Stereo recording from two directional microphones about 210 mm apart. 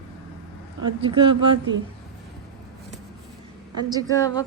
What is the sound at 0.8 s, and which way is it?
Speech, 25° right (ahead or behind).